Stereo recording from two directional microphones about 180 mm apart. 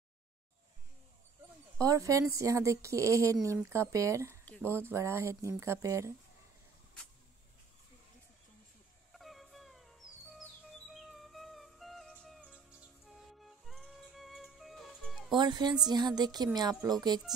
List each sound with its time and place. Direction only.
1.8 s speech: 20° right (ahead or behind)
4.5 s a sound: 10° left (ahead or behind)
4.7 s speech: 15° right (ahead or behind)
9.1 s music: centre (ahead or behind)
12.4 s music: 5° right (ahead or behind)
15.3 s speech: 25° right (ahead or behind)